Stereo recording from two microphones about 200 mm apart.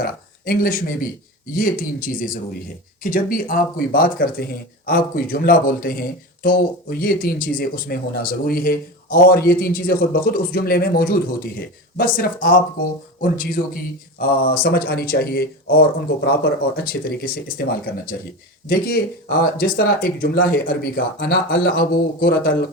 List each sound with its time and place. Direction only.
0.0 s speech: 45° left (ahead or behind)